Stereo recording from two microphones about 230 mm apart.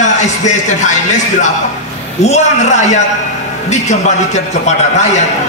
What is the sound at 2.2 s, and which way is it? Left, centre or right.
Speech, left.